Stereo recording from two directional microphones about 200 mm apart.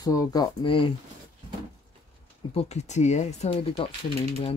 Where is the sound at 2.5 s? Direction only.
35° left (ahead or behind).